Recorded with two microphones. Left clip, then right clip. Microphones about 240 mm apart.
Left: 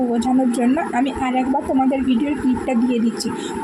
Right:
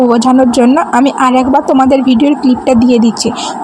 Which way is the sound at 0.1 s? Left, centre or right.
Right.